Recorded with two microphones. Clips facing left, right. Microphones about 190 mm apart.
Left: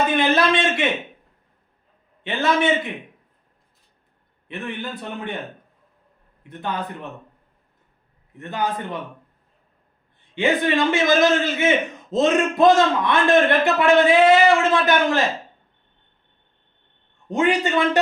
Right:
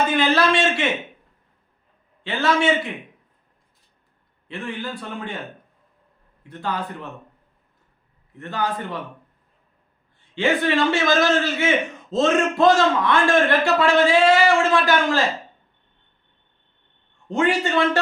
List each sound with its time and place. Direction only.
0.1 s a man's voice: 20° left (ahead or behind)
2.2 s a man's voice: 20° left (ahead or behind)
4.4 s a man's voice: 20° left (ahead or behind)
6.5 s a man's voice: 20° left (ahead or behind)
8.4 s a man's voice: 20° left (ahead or behind)
10.3 s a man's voice: 15° left (ahead or behind)
17.2 s a man's voice: 15° left (ahead or behind)